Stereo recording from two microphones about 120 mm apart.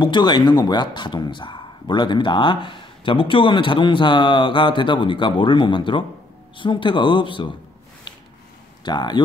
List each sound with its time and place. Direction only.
0.0 s a man's voice: 40° left (ahead or behind)
8.8 s speech: 35° left (ahead or behind)